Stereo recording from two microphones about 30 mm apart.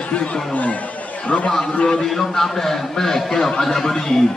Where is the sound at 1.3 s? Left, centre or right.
Left.